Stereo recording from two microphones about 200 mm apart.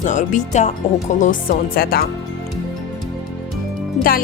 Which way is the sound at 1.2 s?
45° left (ahead or behind).